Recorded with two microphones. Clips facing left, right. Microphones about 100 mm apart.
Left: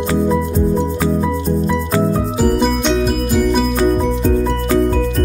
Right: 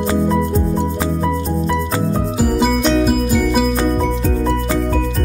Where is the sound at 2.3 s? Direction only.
5° right (ahead or behind).